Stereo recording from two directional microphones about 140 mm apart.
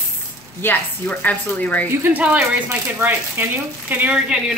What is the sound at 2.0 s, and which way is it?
Speech, 10° right (ahead or behind).